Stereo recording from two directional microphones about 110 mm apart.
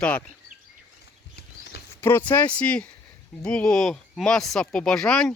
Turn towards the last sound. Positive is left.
turn(degrees=5)  # may be behind; listen again after turning